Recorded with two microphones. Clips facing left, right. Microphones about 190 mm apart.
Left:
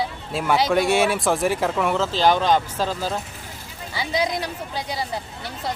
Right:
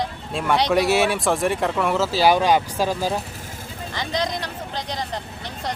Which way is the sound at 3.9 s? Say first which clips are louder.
Left 2 dB; 10° left (ahead or behind).